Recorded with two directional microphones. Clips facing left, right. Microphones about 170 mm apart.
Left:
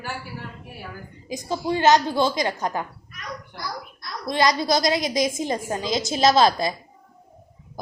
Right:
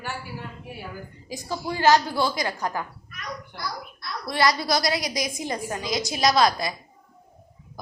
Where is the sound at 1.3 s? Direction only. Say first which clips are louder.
Left 5 dB; 20° left (ahead or behind).